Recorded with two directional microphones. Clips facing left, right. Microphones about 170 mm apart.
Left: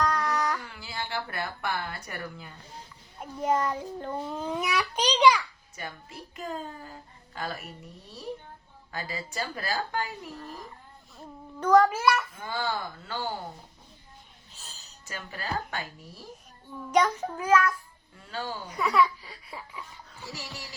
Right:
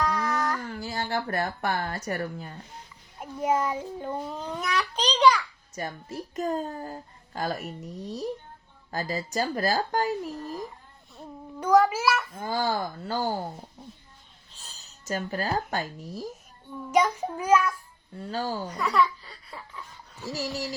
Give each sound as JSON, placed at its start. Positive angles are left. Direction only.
{"t": 0.0, "sound": "child singing", "side_deg": 0}
{"t": 0.6, "sound": "speech", "side_deg": -40}
{"t": 3.2, "sound": "a child's voice", "side_deg": -10}
{"t": 4.4, "sound": "a child's voice", "side_deg": 5}
{"t": 5.7, "sound": "a child's voice", "side_deg": -40}
{"t": 11.6, "sound": "a child's voice", "side_deg": -10}
{"t": 12.3, "sound": "a child's voice", "side_deg": -40}
{"t": 14.6, "sound": "music", "side_deg": 0}
{"t": 15.0, "sound": "speech", "side_deg": -40}
{"t": 16.9, "sound": "a child's voice", "side_deg": -10}
{"t": 18.2, "sound": "a child's voice", "side_deg": -40}
{"t": 18.8, "sound": "laughter", "side_deg": 10}
{"t": 20.3, "sound": "a child's voice", "side_deg": -40}